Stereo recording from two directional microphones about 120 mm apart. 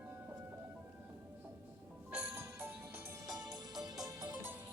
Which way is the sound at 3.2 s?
35° right (ahead or behind).